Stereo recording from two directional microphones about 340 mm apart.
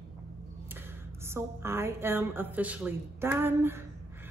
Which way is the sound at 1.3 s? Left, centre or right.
Centre.